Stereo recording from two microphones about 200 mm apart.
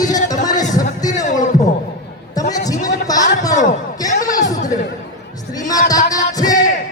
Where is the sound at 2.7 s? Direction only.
40° left (ahead or behind).